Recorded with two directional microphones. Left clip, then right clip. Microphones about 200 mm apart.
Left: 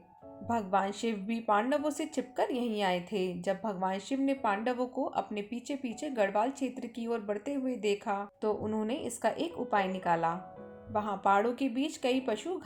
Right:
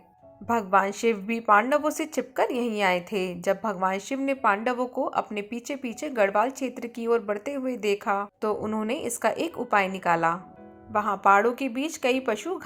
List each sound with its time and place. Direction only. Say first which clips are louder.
0.4 s a woman's voice: right 8 dB; 15° right (ahead or behind)